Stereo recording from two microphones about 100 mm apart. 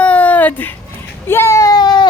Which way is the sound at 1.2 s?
25° left (ahead or behind).